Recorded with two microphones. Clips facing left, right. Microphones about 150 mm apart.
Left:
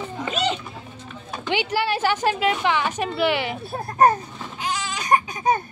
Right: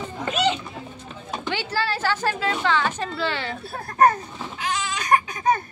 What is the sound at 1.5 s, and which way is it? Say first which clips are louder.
A woman's voice: left 4 dB; 15° left (ahead or behind).